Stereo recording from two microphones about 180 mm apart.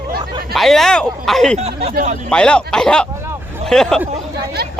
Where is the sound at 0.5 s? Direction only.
Centre (ahead or behind).